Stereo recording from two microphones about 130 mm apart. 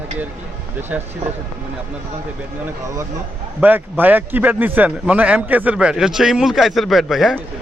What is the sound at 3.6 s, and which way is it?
A man's voice, 15° right (ahead or behind).